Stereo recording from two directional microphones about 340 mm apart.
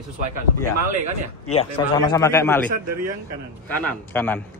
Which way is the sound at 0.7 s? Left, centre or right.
Right.